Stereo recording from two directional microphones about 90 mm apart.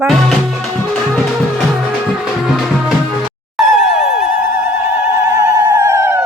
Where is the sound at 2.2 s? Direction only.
5° right (ahead or behind).